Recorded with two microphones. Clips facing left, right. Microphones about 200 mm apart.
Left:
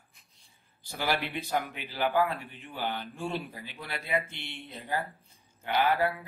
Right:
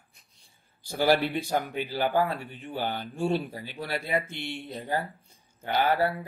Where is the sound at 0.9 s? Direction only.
35° right (ahead or behind).